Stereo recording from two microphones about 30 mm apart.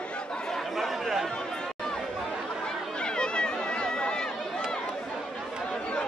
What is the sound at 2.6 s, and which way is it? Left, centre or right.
Chatter, left.